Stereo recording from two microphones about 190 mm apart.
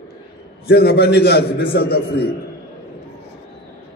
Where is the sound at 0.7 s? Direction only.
60° left (ahead or behind).